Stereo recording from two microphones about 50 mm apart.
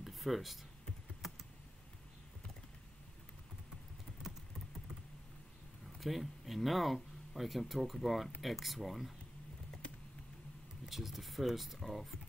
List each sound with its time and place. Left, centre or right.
0.0 s a sound: centre
5.9 s speech: centre
10.9 s speech: centre